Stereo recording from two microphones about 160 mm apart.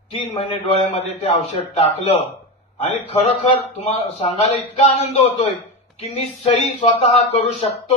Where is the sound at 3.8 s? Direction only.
40° left (ahead or behind).